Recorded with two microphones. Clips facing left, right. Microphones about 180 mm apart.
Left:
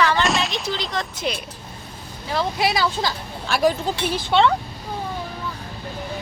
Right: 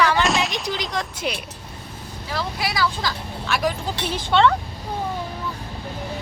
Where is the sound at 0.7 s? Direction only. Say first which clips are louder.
Even; 10° right (ahead or behind).